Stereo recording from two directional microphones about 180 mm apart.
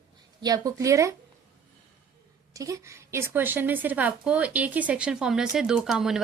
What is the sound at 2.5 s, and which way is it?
A woman's voice, 20° right (ahead or behind).